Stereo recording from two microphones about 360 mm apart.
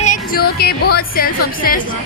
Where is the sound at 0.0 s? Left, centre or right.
Left.